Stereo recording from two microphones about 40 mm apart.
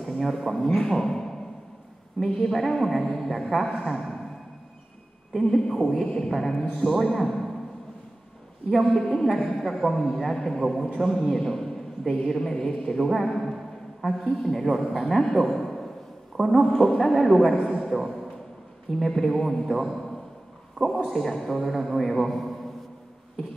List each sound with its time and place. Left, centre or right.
0.0 s a man's voice: centre
5.3 s a man's voice: centre
8.9 s a man's voice: centre
11.3 s a sound: centre
12.3 s a man's voice: centre
16.4 s a man's voice: centre